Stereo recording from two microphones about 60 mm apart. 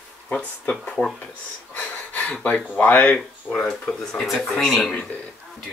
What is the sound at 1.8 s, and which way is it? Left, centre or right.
Speech, left.